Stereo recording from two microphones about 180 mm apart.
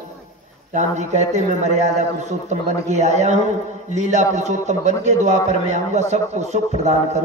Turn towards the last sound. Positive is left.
turn(degrees=-40)  # may be behind; listen again after turning